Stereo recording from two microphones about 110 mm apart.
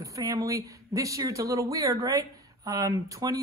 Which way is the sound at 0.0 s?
30° right (ahead or behind).